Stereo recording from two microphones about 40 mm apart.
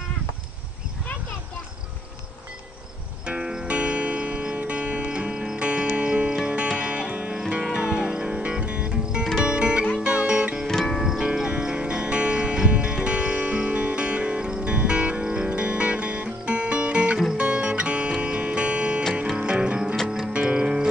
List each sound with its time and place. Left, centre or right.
3.3 s music: right
10.9 s music: centre
11.1 s music: centre